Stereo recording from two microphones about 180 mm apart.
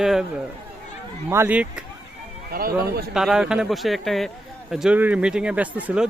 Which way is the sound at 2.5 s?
55° right (ahead or behind).